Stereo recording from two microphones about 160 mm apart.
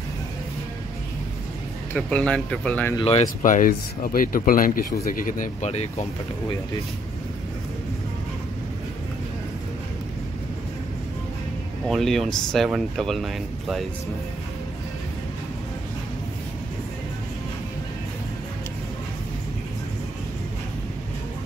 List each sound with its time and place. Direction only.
2.0 s speech: 5° left (ahead or behind)
3.0 s speech: 40° left (ahead or behind)
3.4 s speech: 55° left (ahead or behind)
11.9 s speech: centre (ahead or behind)